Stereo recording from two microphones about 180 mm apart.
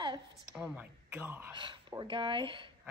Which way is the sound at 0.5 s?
5° right (ahead or behind).